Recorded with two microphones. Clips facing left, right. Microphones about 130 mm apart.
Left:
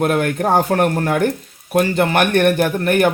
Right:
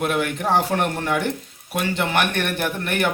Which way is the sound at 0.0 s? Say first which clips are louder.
Left 5 dB; 45° left (ahead or behind).